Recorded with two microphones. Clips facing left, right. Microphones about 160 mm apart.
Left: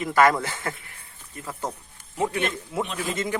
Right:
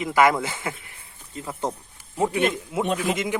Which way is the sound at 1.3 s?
25° right (ahead or behind).